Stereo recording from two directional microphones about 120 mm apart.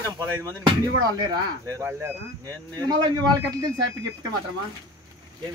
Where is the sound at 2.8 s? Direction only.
35° right (ahead or behind).